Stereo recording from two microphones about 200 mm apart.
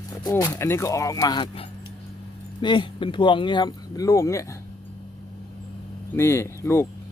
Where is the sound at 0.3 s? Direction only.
20° left (ahead or behind).